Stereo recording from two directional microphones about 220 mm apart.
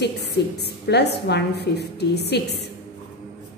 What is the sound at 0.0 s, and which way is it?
A woman's voice, 50° left (ahead or behind).